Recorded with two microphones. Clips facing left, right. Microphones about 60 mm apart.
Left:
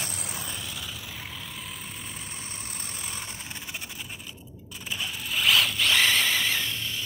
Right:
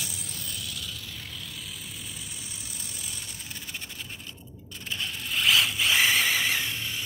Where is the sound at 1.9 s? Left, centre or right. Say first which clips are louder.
Left 2 dB; left.